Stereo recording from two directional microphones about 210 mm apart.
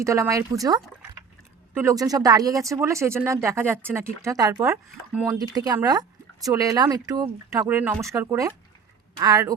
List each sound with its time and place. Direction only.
0.0 s speech: 15° right (ahead or behind)
1.7 s speech: 15° right (ahead or behind)